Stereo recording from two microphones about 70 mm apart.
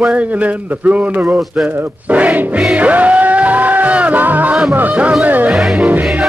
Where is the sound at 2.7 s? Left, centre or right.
Right.